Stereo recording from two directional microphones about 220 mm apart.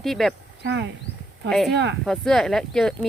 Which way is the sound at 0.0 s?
Centre (ahead or behind).